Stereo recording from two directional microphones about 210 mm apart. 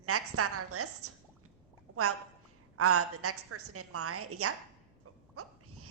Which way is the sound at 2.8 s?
90° right.